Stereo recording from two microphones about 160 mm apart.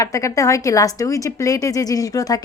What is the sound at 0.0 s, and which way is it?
Speech, 20° left (ahead or behind).